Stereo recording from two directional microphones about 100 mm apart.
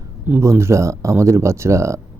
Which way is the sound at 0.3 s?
25° right (ahead or behind).